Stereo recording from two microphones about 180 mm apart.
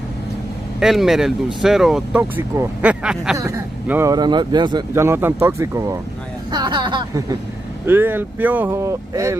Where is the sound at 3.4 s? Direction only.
15° right (ahead or behind).